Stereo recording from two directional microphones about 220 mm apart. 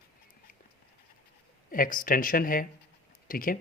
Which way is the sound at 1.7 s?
40° left (ahead or behind).